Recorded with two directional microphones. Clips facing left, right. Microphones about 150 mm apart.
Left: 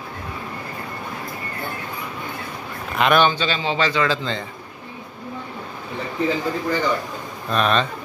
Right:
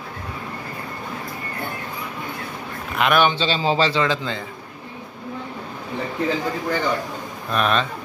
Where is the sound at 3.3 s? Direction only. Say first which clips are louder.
Right 2 dB; 30° right (ahead or behind).